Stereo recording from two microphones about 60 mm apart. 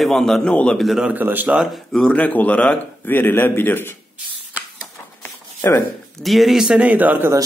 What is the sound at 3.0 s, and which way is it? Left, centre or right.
Speech, left.